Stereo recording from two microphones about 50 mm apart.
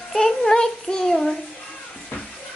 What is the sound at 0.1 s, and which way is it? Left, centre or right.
Child singing, centre.